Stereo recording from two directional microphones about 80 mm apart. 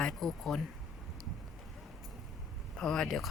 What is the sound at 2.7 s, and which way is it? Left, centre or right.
Speech, centre.